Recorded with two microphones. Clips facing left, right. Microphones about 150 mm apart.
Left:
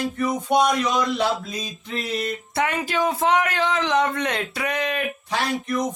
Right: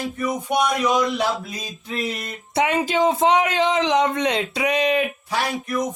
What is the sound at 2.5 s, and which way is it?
A man's voice, 20° right (ahead or behind).